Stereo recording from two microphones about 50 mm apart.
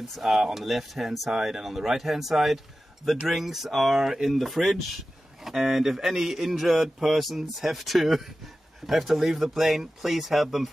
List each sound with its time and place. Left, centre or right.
0.1 s speech: centre